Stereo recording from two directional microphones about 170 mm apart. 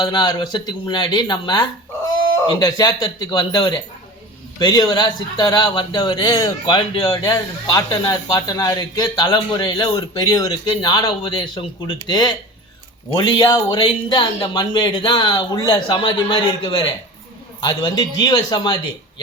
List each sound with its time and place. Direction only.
0.0 s a man's voice: 25° left (ahead or behind)